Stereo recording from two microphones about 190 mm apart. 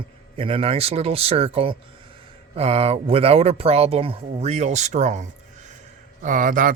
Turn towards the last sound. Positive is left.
turn(degrees=-45)  # may be behind; listen again after turning